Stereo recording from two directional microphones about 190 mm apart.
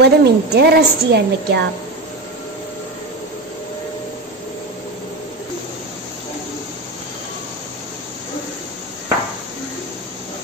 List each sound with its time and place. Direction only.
0.0 s a woman's voice: 60° right (ahead or behind)